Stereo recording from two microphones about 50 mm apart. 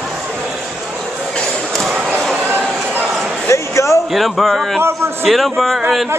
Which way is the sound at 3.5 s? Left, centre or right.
Left.